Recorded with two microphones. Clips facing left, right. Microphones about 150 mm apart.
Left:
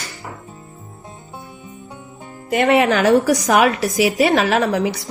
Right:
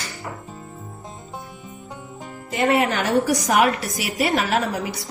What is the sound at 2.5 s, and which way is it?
A woman's voice, 85° left.